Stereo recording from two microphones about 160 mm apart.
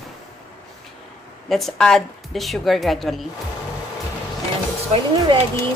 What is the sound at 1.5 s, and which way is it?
A woman's voice, centre (ahead or behind).